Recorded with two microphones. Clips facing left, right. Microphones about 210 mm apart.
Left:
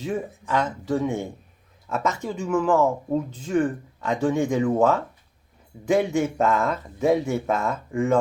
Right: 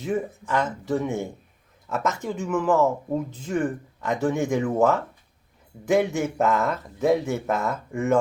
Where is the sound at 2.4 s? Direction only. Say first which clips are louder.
Left 1 dB; 5° right (ahead or behind).